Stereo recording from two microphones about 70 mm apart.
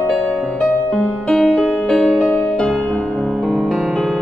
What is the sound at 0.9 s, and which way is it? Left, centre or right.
Music, centre.